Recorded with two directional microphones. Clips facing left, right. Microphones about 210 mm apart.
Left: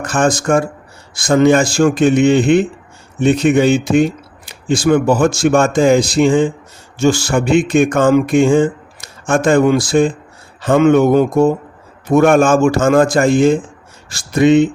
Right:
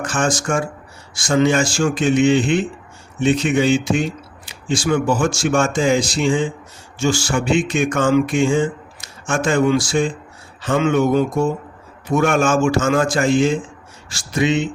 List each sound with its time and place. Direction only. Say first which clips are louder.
0.0 s speech: left 5 dB; 55° left (ahead or behind)